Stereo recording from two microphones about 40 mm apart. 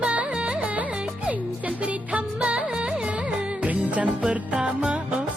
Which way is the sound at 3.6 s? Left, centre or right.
Right.